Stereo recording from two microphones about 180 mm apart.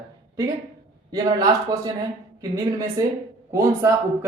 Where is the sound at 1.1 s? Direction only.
20° right (ahead or behind).